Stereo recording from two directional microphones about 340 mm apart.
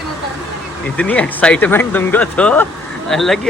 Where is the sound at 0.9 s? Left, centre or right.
Centre.